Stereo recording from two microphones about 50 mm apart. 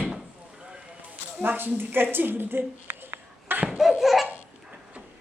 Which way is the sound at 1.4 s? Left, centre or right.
Right.